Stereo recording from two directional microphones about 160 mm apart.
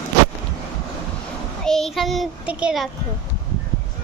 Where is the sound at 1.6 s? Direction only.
Centre (ahead or behind).